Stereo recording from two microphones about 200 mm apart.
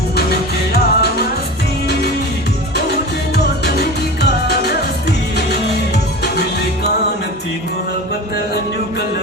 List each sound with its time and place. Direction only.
0.2 s music: 55° left (ahead or behind)
3.3 s music: 55° left (ahead or behind)